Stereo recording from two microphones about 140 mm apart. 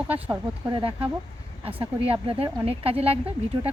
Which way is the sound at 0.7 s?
40° right (ahead or behind).